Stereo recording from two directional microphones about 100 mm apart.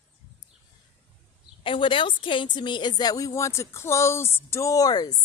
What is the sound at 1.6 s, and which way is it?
A man's voice, 60° left (ahead or behind).